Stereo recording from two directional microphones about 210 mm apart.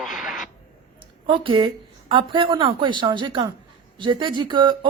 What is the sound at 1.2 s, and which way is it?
Speech, 25° right (ahead or behind).